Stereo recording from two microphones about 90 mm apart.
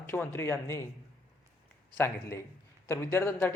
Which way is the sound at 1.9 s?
25° left (ahead or behind).